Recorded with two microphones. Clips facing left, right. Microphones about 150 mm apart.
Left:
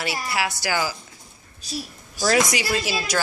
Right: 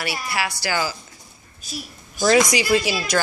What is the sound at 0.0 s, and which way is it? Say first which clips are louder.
Speech: even; 15° left (ahead or behind).